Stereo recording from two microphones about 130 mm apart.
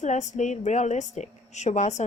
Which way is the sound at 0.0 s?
65° left (ahead or behind).